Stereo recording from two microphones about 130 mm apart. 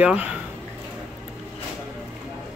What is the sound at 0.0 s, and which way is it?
Speech, 10° right (ahead or behind).